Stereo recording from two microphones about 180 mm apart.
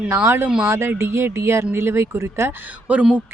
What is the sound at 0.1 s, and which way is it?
A woman's voice, 15° right (ahead or behind).